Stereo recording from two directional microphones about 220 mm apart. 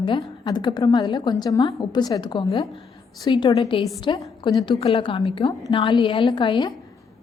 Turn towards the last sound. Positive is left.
turn(degrees=20)  # may be behind; listen again after turning